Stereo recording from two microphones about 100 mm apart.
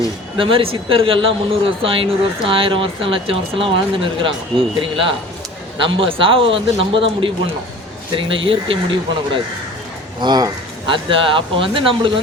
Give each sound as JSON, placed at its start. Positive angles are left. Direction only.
{"t": 0.3, "sound": "speech", "side_deg": -60}
{"t": 10.2, "sound": "speech", "side_deg": -45}
{"t": 10.8, "sound": "speech", "side_deg": -60}